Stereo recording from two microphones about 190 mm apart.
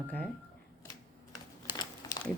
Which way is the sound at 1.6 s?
20° left (ahead or behind).